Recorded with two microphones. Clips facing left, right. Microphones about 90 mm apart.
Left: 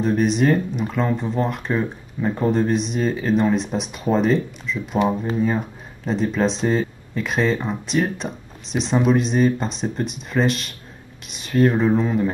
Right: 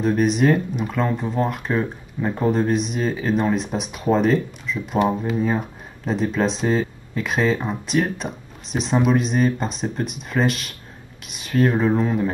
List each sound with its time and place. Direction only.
0.0 s speech: centre (ahead or behind)